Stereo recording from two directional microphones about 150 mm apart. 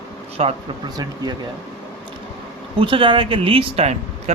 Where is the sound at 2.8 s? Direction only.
35° right (ahead or behind).